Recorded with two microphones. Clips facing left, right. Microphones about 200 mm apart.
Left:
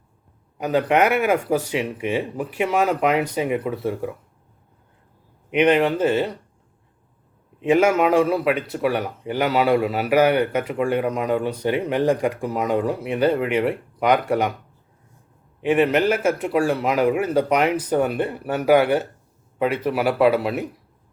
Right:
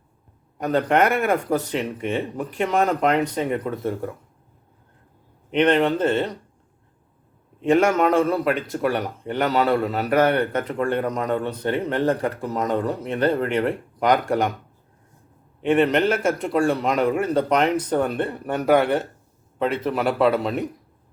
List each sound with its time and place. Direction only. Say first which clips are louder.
0.6 s speech: left 1 dB; 5° left (ahead or behind)
5.5 s speech: left 1 dB; 10° left (ahead or behind)
7.6 s speech: left 1 dB; 5° left (ahead or behind)
15.6 s speech: even; 5° left (ahead or behind)